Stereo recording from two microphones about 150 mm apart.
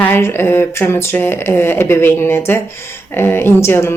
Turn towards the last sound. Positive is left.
turn(degrees=15)  # may be behind; listen again after turning